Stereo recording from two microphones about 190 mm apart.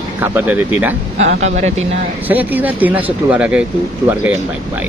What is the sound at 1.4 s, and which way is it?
Speech, 35° right (ahead or behind).